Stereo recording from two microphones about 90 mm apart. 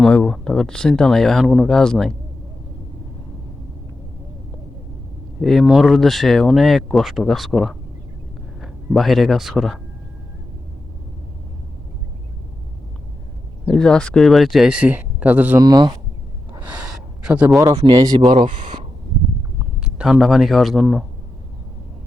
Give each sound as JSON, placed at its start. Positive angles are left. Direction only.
{"t": 0.3, "sound": "speech", "side_deg": 5}
{"t": 5.4, "sound": "speech", "side_deg": 5}
{"t": 13.7, "sound": "speech", "side_deg": 10}
{"t": 14.7, "sound": "speech", "side_deg": -15}
{"t": 15.6, "sound": "speech", "side_deg": -55}
{"t": 16.5, "sound": "gasp", "side_deg": -15}
{"t": 17.6, "sound": "speech", "side_deg": -40}
{"t": 18.3, "sound": "speech", "side_deg": -65}
{"t": 19.8, "sound": "speech", "side_deg": -10}